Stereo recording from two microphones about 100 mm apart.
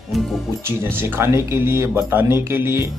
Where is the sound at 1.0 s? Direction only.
25° right (ahead or behind).